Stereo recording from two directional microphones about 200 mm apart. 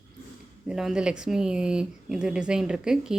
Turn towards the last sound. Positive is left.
turn(degrees=-5)  # may be behind; listen again after turning